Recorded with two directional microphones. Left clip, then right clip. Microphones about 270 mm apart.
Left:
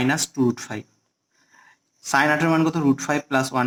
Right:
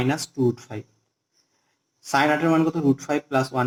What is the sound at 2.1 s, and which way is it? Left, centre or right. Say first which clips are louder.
Speech: left 1 dB; left.